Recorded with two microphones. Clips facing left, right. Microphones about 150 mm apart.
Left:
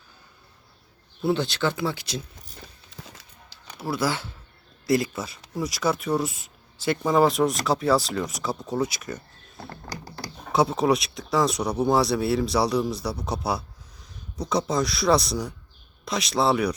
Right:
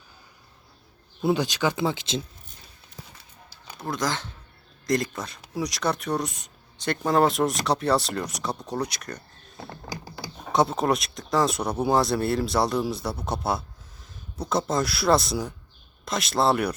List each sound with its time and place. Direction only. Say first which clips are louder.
1.2 s speech: even; 15° right (ahead or behind)
3.8 s speech: left 2 dB; 5° left (ahead or behind)
10.5 s speech: left 1 dB; centre (ahead or behind)